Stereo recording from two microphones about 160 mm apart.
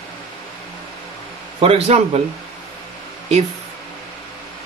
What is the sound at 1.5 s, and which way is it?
Speech, 40° right (ahead or behind).